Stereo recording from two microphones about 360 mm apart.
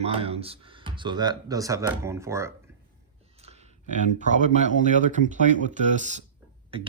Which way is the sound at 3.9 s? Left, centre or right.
Centre.